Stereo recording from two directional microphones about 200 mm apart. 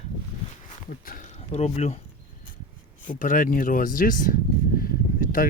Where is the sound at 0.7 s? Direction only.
40° left (ahead or behind).